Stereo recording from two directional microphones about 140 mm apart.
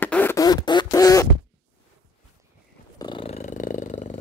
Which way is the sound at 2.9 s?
35° left (ahead or behind).